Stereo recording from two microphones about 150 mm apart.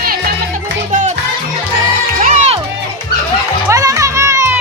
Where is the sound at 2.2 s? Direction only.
55° right (ahead or behind).